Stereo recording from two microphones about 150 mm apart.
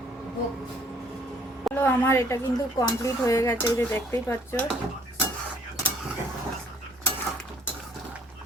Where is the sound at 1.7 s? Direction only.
15° left (ahead or behind).